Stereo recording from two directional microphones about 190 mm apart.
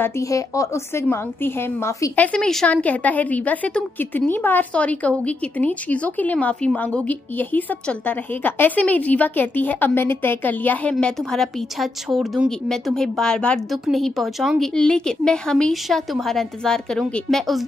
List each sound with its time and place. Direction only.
0.0 s a woman's voice: 15° left (ahead or behind); by 17.6 s centre (ahead or behind)